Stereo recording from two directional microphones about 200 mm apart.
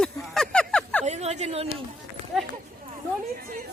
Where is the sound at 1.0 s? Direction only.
35° right (ahead or behind).